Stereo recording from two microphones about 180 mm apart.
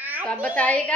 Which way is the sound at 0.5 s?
5° left (ahead or behind).